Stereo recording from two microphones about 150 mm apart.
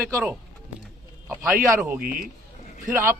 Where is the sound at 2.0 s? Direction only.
75° right (ahead or behind).